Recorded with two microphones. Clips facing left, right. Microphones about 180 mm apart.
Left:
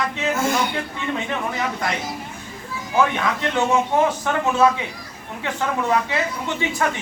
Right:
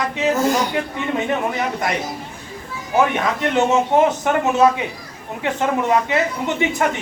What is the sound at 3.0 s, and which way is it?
A man's voice, 20° right (ahead or behind).